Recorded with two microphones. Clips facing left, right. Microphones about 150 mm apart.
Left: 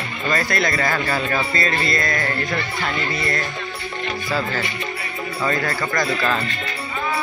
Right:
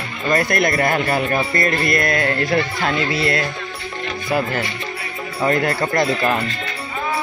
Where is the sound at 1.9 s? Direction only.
60° right (ahead or behind).